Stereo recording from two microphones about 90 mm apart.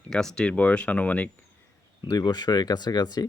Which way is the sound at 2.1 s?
50° left (ahead or behind).